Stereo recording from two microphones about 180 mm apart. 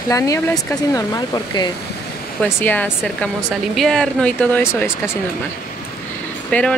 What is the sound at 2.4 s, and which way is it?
Speech, 10° left (ahead or behind).